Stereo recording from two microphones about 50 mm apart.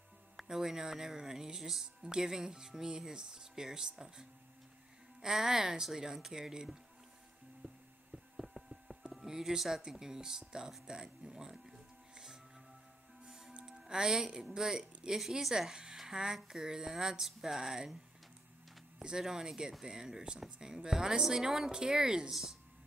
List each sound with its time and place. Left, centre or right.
0.4 s speech: centre
7.6 s music: right
8.4 s a sound: centre
9.2 s speech: centre
13.2 s music: centre
13.8 s speech: centre
16.0 s a sound: centre
16.4 s speech: centre
19.2 s speech: centre